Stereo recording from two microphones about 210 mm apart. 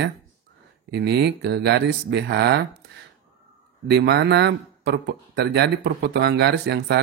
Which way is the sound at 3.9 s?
50° right (ahead or behind).